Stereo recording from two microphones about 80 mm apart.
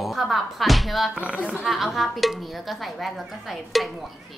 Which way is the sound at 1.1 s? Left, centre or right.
Centre.